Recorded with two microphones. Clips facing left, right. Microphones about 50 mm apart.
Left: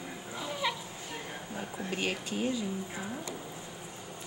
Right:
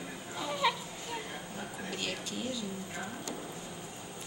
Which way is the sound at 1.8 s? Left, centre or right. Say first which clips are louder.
Left 5 dB; left.